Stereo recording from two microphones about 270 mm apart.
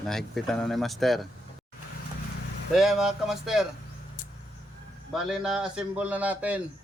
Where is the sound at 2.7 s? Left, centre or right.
Centre.